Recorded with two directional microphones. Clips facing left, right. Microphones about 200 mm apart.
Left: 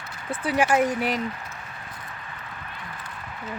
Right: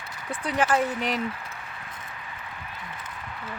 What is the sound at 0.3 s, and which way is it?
Speech, 10° left (ahead or behind).